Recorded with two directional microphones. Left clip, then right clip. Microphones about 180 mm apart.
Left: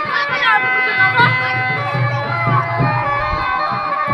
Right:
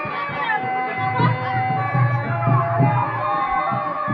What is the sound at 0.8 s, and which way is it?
Music, 40° left (ahead or behind).